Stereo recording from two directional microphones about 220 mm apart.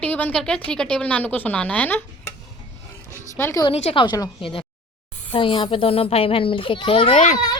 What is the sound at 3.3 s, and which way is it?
A woman's voice, 10° left (ahead or behind).